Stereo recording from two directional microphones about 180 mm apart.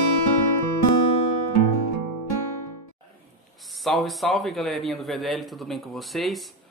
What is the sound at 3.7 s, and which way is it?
Speech, centre (ahead or behind).